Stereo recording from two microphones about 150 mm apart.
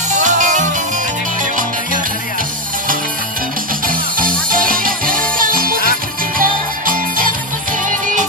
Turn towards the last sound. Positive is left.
turn(degrees=-65)  # may be behind; listen again after turning